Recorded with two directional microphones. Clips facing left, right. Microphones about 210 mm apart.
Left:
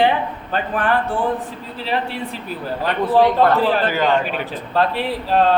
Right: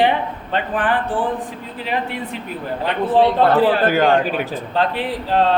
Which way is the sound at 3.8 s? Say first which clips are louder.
Right 3 dB; 50° right (ahead or behind).